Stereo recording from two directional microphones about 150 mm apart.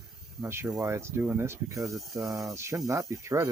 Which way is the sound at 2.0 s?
Centre (ahead or behind).